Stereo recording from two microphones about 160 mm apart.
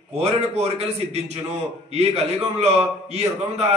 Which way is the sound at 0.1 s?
40° right (ahead or behind).